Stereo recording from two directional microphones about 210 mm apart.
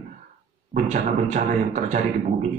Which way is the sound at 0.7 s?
35° right (ahead or behind).